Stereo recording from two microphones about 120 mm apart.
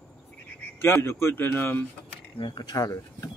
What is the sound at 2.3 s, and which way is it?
Speech, 40° left (ahead or behind).